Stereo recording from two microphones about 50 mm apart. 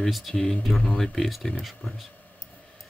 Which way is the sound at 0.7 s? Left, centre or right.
Centre.